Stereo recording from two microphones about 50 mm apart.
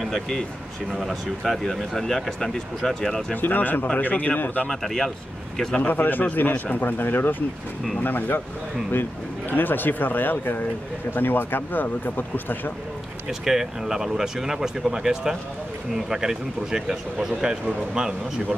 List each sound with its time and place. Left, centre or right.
0.0 s speech: centre
3.3 s speech: left
4.6 s speech: centre
5.8 s speech: left
9.5 s speech: left
13.3 s speech: centre